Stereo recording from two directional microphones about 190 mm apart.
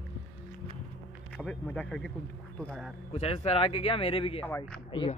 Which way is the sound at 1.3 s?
5° left (ahead or behind).